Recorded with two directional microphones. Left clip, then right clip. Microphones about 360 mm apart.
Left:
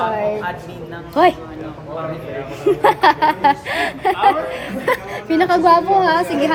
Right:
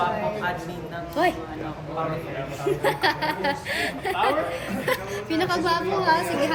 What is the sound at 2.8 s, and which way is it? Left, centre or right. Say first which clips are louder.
A woman's voice: left 11 dB; centre.